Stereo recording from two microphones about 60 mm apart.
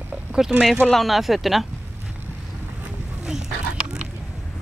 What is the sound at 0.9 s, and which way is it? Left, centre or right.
Speech, centre.